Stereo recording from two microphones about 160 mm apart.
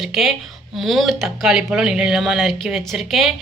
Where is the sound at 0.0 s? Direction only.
Centre (ahead or behind).